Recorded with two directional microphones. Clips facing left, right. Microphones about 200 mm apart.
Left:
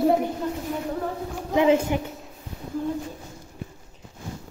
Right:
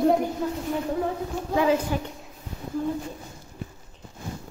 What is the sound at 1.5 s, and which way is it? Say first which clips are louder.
Speech: left 3 dB; 25° left (ahead or behind).